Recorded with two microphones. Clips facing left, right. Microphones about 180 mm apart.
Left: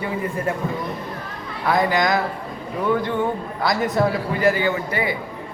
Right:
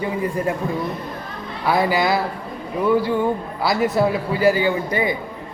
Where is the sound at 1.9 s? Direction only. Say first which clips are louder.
Right 1 dB; 10° right (ahead or behind).